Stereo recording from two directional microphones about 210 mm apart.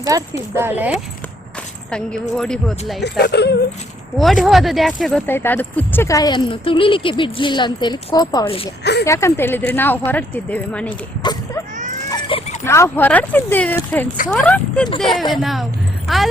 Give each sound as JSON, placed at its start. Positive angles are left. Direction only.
{"t": 0.0, "sound": "speech", "side_deg": -15}
{"t": 3.0, "sound": "speech", "side_deg": 55}
{"t": 4.2, "sound": "speech", "side_deg": 0}
{"t": 8.8, "sound": "speech", "side_deg": 55}
{"t": 9.0, "sound": "speech", "side_deg": 15}
{"t": 11.2, "sound": "speech", "side_deg": 20}
{"t": 12.1, "sound": "a sound", "side_deg": 25}
{"t": 12.6, "sound": "speech", "side_deg": 10}